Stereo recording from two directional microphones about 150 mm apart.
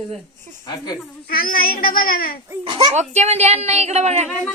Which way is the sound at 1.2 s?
75° left (ahead or behind).